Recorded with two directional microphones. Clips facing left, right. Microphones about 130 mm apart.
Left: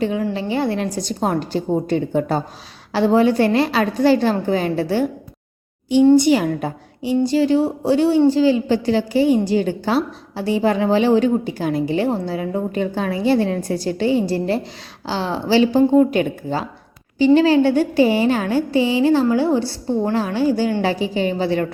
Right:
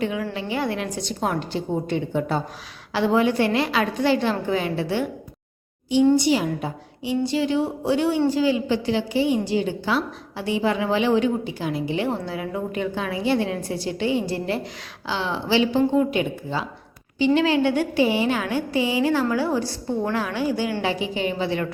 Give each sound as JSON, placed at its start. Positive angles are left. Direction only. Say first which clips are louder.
{"t": 0.0, "sound": "a sound", "louder": "left 5 dB", "side_deg": 35}
{"t": 0.3, "sound": "a woman's voice", "louder": "left 5 dB", "side_deg": 30}
{"t": 6.1, "sound": "a woman's voice", "louder": "left 6 dB", "side_deg": 50}